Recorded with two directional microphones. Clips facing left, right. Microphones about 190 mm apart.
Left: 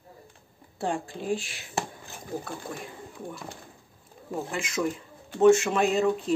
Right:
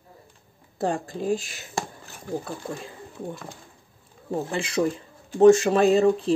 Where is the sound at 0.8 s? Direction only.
40° right (ahead or behind).